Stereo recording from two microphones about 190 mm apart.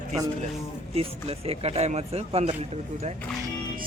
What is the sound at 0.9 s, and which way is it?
Speech, 30° right (ahead or behind).